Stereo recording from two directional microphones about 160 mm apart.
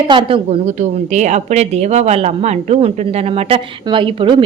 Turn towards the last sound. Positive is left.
turn(degrees=-30)  # may be behind; listen again after turning